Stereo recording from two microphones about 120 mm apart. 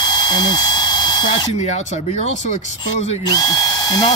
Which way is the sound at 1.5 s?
70° left (ahead or behind).